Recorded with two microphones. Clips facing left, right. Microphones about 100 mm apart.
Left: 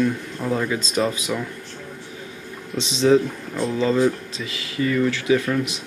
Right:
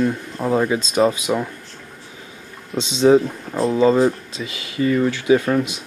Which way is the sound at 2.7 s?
30° right (ahead or behind).